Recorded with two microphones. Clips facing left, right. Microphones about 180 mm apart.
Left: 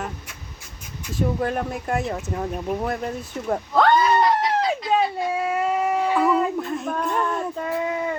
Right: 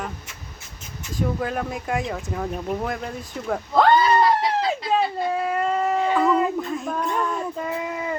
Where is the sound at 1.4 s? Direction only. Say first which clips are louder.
Left 2 dB; centre (ahead or behind).